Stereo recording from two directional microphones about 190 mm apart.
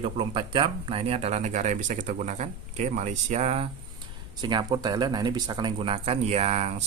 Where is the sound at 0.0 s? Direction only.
25° right (ahead or behind).